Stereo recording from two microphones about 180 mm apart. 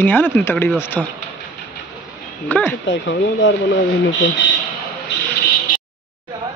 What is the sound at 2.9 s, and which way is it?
Speech, 90° left.